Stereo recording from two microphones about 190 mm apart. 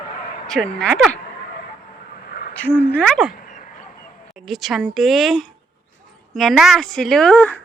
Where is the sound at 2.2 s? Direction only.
55° left (ahead or behind).